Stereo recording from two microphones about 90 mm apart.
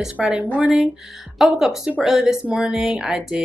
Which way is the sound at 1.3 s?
5° right (ahead or behind).